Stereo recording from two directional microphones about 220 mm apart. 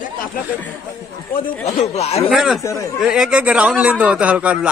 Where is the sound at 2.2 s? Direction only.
Centre (ahead or behind).